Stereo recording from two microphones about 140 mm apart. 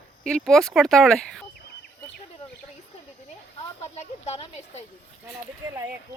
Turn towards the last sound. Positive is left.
turn(degrees=50)  # may be behind; listen again after turning